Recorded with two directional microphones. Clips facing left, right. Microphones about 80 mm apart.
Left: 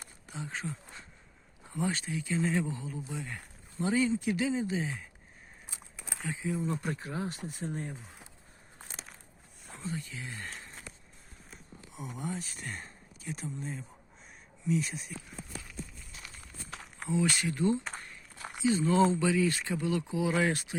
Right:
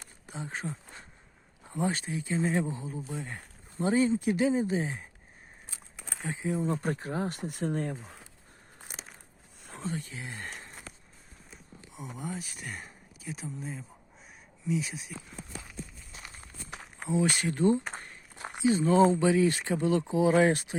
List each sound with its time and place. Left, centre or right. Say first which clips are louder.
0.3 s a sound: right 2 dB; right
1.9 s speech: right 1 dB; right
6.2 s speech: right 3 dB; right
9.6 s speech: right 3 dB; right
10.2 s speech: right 2 dB; right
11.5 s a sound: even; centre
12.4 s speech: even; centre
16.1 s walk: right 3 dB; right
16.6 s walk: right 1 dB; centre
17.1 s speech: right 2 dB; right